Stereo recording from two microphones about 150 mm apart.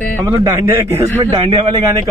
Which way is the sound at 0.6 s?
20° right (ahead or behind).